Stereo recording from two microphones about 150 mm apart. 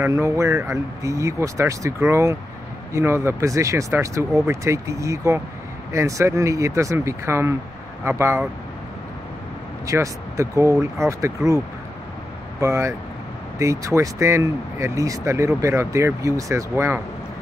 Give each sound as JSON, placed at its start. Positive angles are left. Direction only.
{"t": 0.0, "sound": "speech", "side_deg": -20}
{"t": 9.8, "sound": "speech", "side_deg": -20}